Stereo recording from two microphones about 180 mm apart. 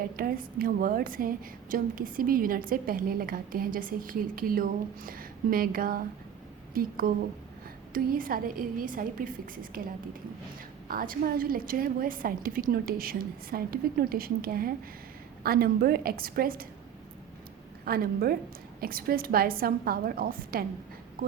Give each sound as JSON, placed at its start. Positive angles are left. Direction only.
{"t": 0.2, "sound": "a woman's voice", "side_deg": -55}
{"t": 17.8, "sound": "a woman's voice", "side_deg": -55}